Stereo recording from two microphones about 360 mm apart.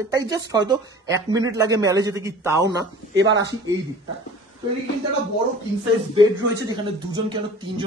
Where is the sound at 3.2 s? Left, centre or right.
Right.